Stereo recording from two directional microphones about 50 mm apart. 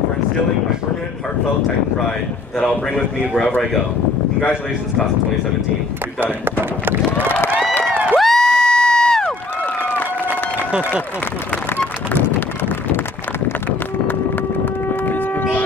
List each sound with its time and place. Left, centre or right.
6.2 s speech: right
8.2 s crowd: centre
12.1 s run: left
14.6 s a sound: left